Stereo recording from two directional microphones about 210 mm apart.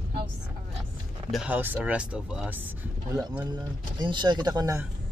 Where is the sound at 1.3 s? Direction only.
5° right (ahead or behind).